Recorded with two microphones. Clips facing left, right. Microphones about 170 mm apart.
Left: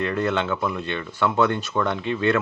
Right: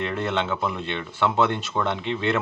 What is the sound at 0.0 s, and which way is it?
Speech, 20° right (ahead or behind).